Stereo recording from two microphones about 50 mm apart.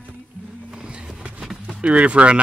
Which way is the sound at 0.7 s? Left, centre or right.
Centre.